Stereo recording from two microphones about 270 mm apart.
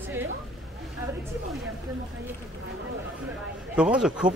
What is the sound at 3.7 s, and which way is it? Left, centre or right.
Speech, centre.